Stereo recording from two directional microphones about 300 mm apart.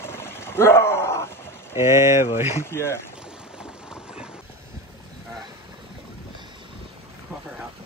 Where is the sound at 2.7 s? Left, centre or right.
Centre.